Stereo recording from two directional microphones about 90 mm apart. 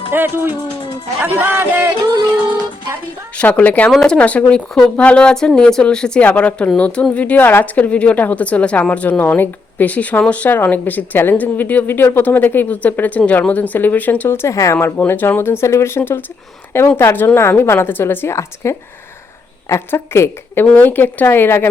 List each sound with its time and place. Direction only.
0.1 s speech: 25° right (ahead or behind)
3.3 s a woman's voice: 15° left (ahead or behind); by 14.8 s 35° left (ahead or behind)
14.8 s a woman's voice: 25° left (ahead or behind)